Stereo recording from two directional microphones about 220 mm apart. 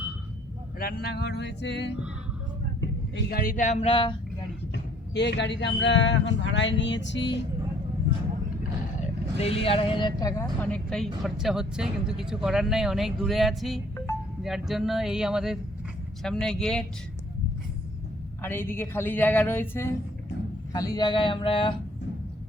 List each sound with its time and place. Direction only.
0.8 s speech: 45° left (ahead or behind); by 4.1 s 25° left (ahead or behind)
4.7 s speech: 50° left (ahead or behind)
9.4 s speech: 25° left (ahead or behind); by 16.8 s 5° left (ahead or behind)
18.4 s a man's voice: 10° left (ahead or behind)